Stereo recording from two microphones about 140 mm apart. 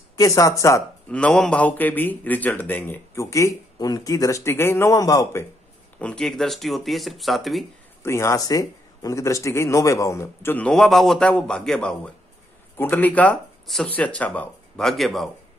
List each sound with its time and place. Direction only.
0.2 s a man's voice: 25° left (ahead or behind)
1.1 s a man's voice: 5° left (ahead or behind); by 5.5 s 20° left (ahead or behind)
5.9 s speech: 5° left (ahead or behind)
8.0 s a man's voice: 20° left (ahead or behind); by 15.2 s centre (ahead or behind)